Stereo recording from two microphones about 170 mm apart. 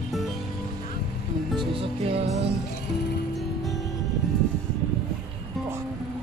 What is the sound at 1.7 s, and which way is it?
Music, 35° right (ahead or behind).